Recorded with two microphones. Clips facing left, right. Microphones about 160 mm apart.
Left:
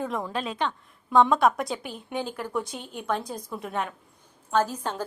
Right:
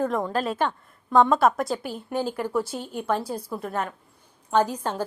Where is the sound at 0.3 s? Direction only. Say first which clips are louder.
Right 4 dB; centre (ahead or behind).